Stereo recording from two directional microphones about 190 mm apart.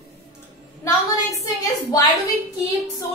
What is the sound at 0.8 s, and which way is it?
A woman's voice, 15° left (ahead or behind).